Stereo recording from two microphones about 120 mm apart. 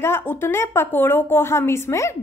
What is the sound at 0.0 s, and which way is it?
A woman's voice, 20° left (ahead or behind).